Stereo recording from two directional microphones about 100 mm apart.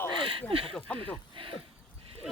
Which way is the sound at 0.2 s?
60° right (ahead or behind).